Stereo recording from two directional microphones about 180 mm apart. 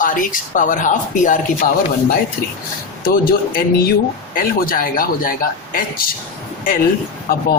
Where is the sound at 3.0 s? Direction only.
55° left (ahead or behind).